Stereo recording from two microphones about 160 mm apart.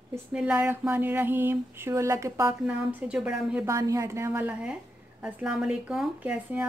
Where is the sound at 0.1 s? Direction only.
5° right (ahead or behind).